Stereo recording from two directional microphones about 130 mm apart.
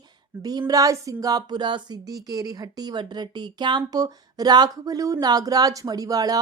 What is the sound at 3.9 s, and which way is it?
Speech, 30° right (ahead or behind).